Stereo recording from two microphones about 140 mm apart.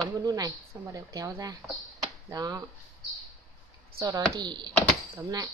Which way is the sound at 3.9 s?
25° right (ahead or behind).